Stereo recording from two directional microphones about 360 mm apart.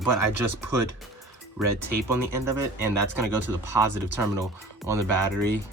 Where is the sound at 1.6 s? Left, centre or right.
Centre.